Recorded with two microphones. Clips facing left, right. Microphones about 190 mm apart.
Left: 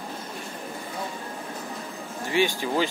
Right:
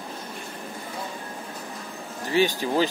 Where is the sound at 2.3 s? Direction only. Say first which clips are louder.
Right 2 dB; 40° right (ahead or behind).